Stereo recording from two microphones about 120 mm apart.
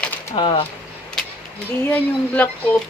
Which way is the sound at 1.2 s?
5° left (ahead or behind).